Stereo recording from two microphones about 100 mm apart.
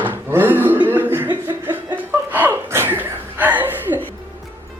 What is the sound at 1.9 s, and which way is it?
Chuckle, 20° right (ahead or behind).